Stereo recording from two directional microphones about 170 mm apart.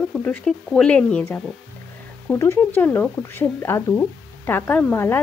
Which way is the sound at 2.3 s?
15° left (ahead or behind).